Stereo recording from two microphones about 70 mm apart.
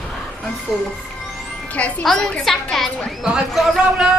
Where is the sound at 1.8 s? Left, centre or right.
Centre.